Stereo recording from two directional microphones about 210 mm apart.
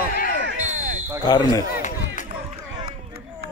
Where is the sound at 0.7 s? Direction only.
40° right (ahead or behind).